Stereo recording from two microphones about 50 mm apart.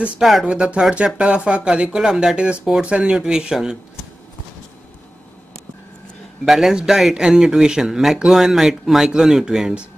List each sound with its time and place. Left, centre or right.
0.2 s speech: centre
0.5 s speech: centre
6.4 s speech: centre